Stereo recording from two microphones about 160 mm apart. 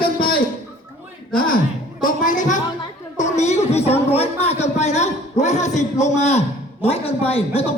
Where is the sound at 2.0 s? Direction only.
55° left (ahead or behind); by 7.7 s 40° left (ahead or behind).